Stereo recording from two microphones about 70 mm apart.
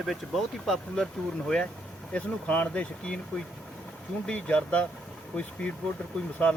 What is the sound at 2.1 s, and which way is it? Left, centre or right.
Speech, centre.